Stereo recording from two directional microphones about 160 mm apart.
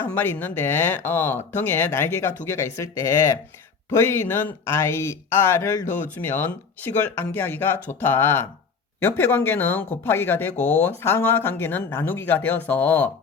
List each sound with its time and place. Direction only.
0.0 s speech: 10° left (ahead or behind)